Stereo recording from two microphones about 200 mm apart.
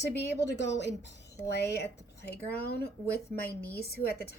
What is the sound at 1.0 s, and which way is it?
A woman's voice, 55° left (ahead or behind).